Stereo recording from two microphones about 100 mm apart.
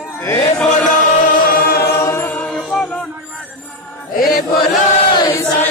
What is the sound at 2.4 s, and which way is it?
Music, centre (ahead or behind).